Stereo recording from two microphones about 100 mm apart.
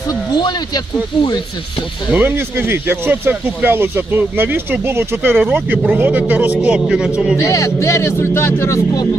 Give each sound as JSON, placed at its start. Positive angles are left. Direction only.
{"t": 0.4, "sound": "speech", "side_deg": 45}
{"t": 2.1, "sound": "speech", "side_deg": -20}
{"t": 5.8, "sound": "a man's voice", "side_deg": -10}
{"t": 7.3, "sound": "a man's voice", "side_deg": 30}